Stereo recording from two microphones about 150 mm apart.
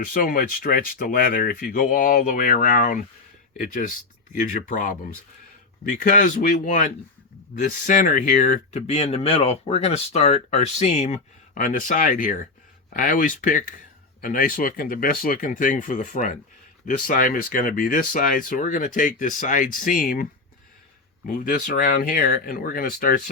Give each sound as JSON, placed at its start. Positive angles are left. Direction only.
{"t": 0.0, "sound": "speech", "side_deg": 75}
{"t": 6.0, "sound": "speech", "side_deg": 65}
{"t": 21.2, "sound": "speech", "side_deg": 70}